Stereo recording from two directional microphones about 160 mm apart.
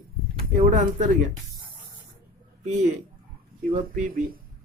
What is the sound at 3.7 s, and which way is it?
Speech, 60° right (ahead or behind).